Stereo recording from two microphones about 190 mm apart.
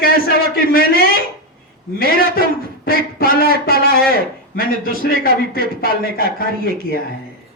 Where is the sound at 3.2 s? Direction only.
50° left (ahead or behind).